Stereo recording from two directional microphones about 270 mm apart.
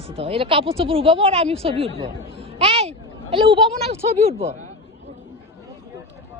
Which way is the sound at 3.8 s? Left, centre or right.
Right.